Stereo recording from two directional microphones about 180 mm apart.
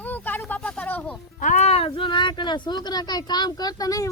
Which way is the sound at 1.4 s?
40° left (ahead or behind).